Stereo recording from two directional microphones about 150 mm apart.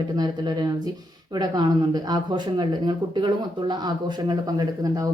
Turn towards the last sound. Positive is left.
turn(degrees=-25)  # may be behind; listen again after turning